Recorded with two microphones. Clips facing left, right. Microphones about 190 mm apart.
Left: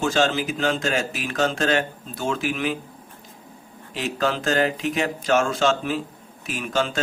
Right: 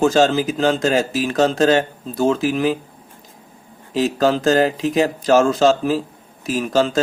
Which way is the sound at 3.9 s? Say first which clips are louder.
Right 8 dB; 40° right (ahead or behind).